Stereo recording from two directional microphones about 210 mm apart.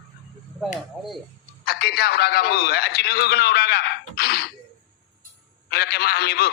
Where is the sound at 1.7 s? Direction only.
50° left (ahead or behind).